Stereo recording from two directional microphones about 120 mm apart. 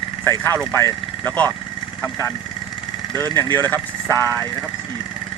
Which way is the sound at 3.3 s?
20° left (ahead or behind).